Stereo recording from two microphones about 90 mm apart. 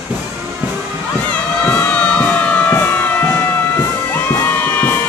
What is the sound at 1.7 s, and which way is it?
Crowd, 15° left (ahead or behind).